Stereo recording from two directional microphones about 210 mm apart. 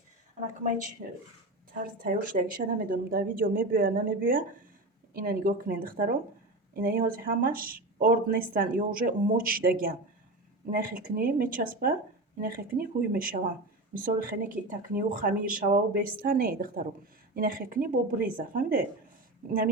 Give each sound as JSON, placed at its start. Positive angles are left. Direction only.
{"t": 1.8, "sound": "speech", "side_deg": -45}